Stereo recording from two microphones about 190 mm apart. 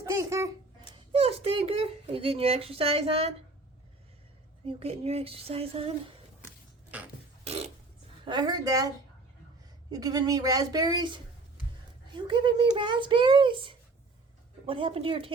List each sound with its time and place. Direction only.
0.0 s a child's voice: 15° right (ahead or behind)
1.1 s a child's voice: 30° right (ahead or behind)
4.6 s a child's voice: 30° right (ahead or behind)
7.4 s burping: 30° right (ahead or behind)
8.2 s speech: 25° right (ahead or behind)
9.9 s speech: 20° right (ahead or behind)